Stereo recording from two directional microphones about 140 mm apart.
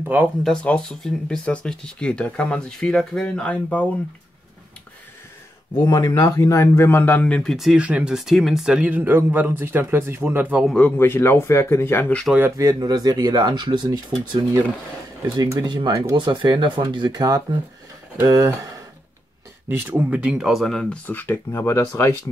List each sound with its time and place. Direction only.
0.4 s speech: 5° left (ahead or behind)
5.9 s speech: 25° left (ahead or behind); by 7.5 s 10° left (ahead or behind)
7.5 s speech: 5° right (ahead or behind)
10.6 s a man's voice: centre (ahead or behind)
11.0 s speech: 15° left (ahead or behind)
12.4 s speech: 20° right (ahead or behind)
19.7 s speech: 15° right (ahead or behind); by 21.0 s 5° left (ahead or behind)
21.1 s speech: 15° left (ahead or behind)